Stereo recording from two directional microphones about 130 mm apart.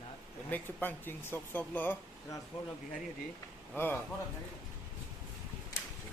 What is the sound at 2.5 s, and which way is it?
Speech, 45° left (ahead or behind).